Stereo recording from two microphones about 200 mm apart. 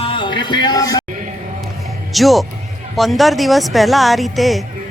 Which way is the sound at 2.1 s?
Centre (ahead or behind).